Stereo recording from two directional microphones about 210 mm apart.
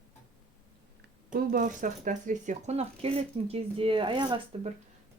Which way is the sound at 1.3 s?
40° right (ahead or behind).